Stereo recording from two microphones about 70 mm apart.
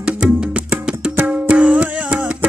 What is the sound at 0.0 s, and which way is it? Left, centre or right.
Music, centre.